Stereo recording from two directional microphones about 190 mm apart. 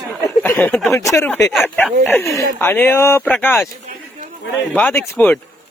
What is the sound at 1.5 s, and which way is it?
Speech, centre (ahead or behind).